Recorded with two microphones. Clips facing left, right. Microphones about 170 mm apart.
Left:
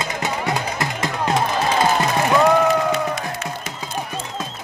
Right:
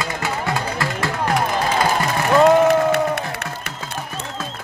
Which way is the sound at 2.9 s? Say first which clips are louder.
Right 3 dB; 65° right (ahead or behind).